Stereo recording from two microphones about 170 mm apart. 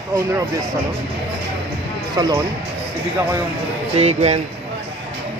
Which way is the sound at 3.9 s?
40° right (ahead or behind).